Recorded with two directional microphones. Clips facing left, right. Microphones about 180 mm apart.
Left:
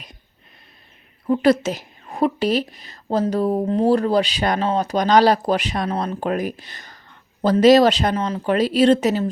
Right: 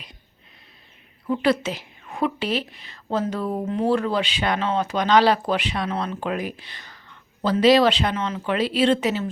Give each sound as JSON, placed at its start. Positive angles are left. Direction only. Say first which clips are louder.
{"t": 1.3, "sound": "speech", "louder": "left 5 dB", "side_deg": 40}